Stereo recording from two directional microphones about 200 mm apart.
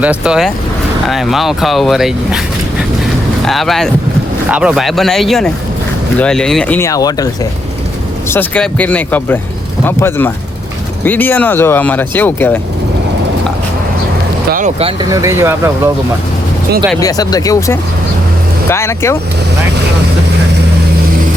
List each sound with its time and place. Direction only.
0.0 s speech: 5° right (ahead or behind)
3.4 s speech: centre (ahead or behind); by 7.3 s 15° left (ahead or behind)
8.3 s speech: 5° left (ahead or behind)
14.5 s speech: 35° right (ahead or behind)
15.1 s speech: 15° right (ahead or behind)
17.0 s speech: 20° left (ahead or behind)